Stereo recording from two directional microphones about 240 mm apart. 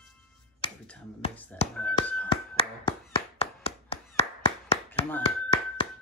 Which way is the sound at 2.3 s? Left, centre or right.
Left.